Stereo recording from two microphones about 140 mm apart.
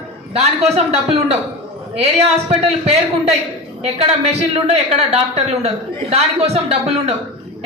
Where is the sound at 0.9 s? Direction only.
50° right (ahead or behind).